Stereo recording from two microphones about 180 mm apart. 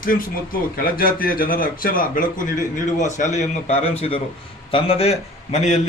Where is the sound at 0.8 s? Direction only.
55° left (ahead or behind).